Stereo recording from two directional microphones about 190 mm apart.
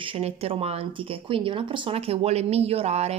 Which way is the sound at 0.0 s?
30° right (ahead or behind).